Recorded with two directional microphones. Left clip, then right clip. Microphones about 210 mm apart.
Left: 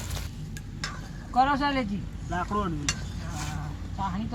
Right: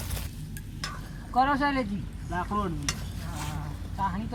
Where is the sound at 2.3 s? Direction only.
10° left (ahead or behind).